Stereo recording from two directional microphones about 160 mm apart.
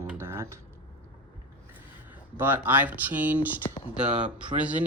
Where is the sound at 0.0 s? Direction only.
15° right (ahead or behind).